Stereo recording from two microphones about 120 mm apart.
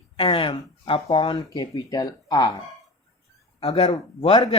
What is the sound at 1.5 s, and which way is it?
Speech, 35° left (ahead or behind).